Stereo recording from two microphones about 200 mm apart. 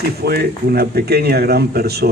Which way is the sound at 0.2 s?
50° right (ahead or behind).